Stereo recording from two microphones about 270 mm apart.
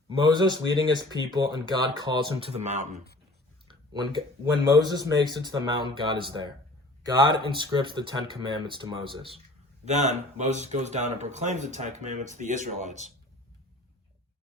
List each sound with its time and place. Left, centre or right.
0.1 s speech: centre
3.7 s a sound: centre
4.7 s speech: centre